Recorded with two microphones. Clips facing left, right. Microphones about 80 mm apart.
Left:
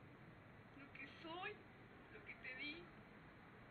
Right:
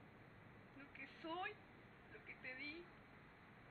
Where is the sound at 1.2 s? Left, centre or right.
Centre.